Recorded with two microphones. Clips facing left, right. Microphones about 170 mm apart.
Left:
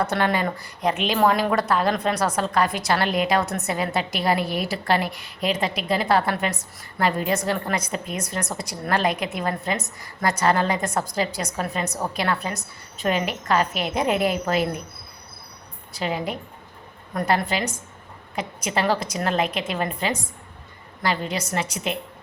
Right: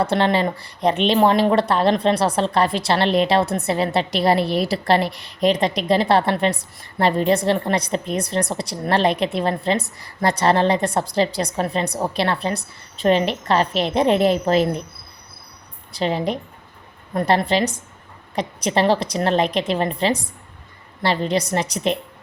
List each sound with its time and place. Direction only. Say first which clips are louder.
0.0 s speech: right 4 dB; 25° right (ahead or behind)
15.9 s speech: right 5 dB; 35° right (ahead or behind)